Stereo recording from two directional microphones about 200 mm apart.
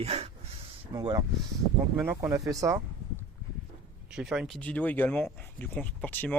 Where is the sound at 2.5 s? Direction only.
15° right (ahead or behind).